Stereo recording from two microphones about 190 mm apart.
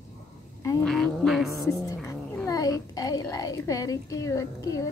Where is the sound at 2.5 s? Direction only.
20° left (ahead or behind).